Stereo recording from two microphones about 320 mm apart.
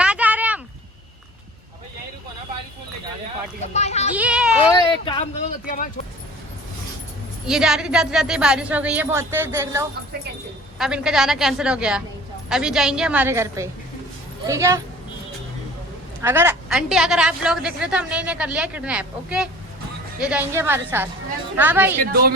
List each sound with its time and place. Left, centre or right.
0.0 s a sound: centre
3.6 s speech: left
4.1 s speech: centre
5.0 s speech: centre
7.4 s a woman's voice: centre
16.2 s a woman's voice: centre
22.0 s a woman's voice: right